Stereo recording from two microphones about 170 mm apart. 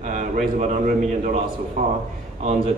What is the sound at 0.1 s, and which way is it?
A man's voice, 45° right (ahead or behind).